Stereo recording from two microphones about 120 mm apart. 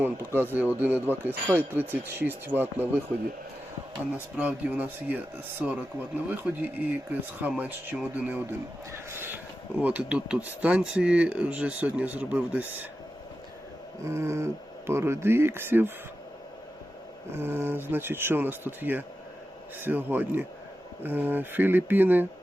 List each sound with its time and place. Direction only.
0.0 s speech: 15° right (ahead or behind)
4.4 s speech: 10° right (ahead or behind)
9.0 s a sound: 20° right (ahead or behind)
9.8 s speech: 10° right (ahead or behind)
14.0 s speech: 25° right (ahead or behind)
17.3 s speech: 20° right (ahead or behind)